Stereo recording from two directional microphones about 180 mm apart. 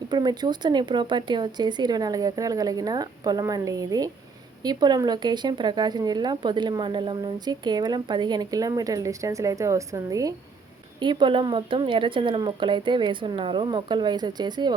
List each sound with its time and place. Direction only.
0.1 s speech: 25° right (ahead or behind)